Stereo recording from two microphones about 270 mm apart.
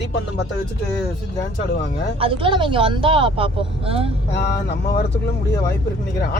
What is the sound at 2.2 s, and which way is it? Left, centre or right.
Speech, centre.